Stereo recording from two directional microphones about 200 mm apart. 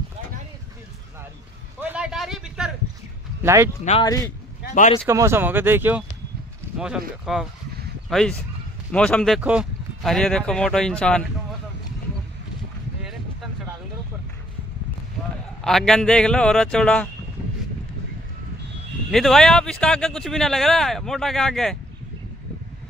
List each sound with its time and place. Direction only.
1.8 s a sound: 5° right (ahead or behind)
3.4 s speech: 15° right (ahead or behind)
4.6 s speech: 40° left (ahead or behind)
5.0 s speech: 15° right (ahead or behind); by 11.2 s 5° left (ahead or behind)
15.6 s speech: 5° left (ahead or behind)
19.0 s speech: centre (ahead or behind)